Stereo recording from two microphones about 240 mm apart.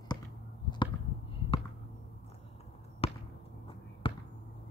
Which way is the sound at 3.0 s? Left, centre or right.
Left.